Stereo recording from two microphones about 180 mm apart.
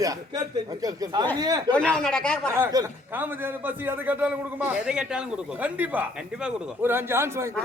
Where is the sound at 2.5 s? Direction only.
15° right (ahead or behind).